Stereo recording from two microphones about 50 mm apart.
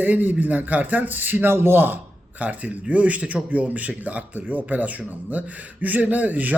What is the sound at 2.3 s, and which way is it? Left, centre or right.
Speech, right.